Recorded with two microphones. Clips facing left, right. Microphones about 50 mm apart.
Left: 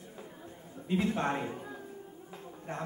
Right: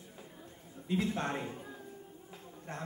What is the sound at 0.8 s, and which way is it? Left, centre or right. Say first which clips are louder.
Speech: left 3 dB; left.